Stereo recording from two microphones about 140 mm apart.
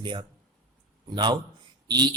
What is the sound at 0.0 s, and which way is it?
A man's voice, 35° right (ahead or behind).